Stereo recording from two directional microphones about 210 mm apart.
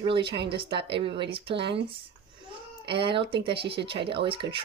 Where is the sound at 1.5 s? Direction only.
55° right (ahead or behind).